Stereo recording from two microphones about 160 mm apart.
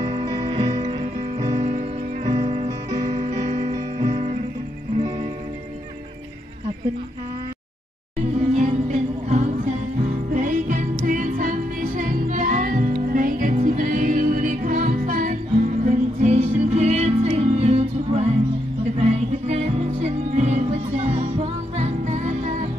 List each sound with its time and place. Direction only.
0.0 s music: 25° right (ahead or behind)
4.0 s music: 45° right (ahead or behind)
8.5 s music: 45° right (ahead or behind)